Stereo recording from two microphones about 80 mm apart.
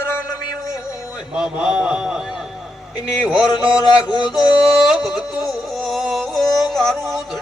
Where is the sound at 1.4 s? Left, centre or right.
Centre.